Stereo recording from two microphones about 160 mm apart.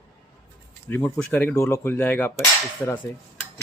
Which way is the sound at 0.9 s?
10° left (ahead or behind).